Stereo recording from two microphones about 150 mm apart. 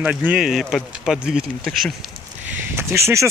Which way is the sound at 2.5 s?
15° right (ahead or behind).